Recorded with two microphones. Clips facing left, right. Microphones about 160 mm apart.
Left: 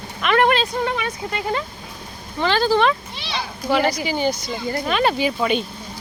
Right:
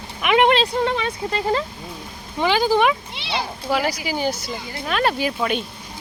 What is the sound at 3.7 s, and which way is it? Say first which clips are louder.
Speech: left 3 dB; 5° right (ahead or behind).